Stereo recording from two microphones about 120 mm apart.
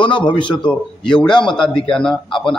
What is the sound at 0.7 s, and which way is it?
A man's voice, 5° left (ahead or behind).